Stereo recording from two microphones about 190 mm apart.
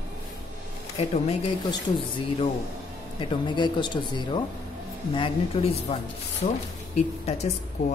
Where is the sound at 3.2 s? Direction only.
25° left (ahead or behind).